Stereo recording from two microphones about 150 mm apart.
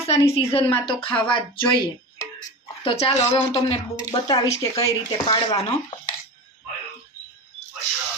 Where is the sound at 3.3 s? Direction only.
40° left (ahead or behind).